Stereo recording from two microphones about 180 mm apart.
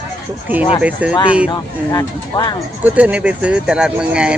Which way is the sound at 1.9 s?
25° left (ahead or behind).